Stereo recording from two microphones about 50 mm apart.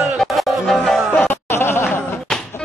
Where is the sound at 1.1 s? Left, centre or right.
Left.